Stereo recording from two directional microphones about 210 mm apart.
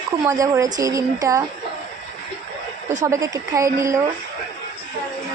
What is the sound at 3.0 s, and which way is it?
Speech, 15° right (ahead or behind).